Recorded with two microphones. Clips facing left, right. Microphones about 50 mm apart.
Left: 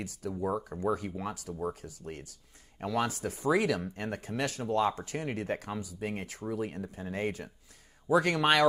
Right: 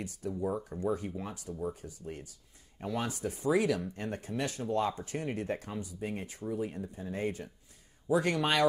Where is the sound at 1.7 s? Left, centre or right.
Left.